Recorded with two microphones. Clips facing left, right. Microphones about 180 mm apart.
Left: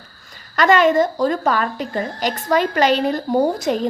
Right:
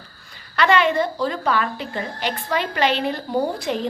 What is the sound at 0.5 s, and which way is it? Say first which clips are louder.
A woman's voice: left 4 dB; 45° left (ahead or behind).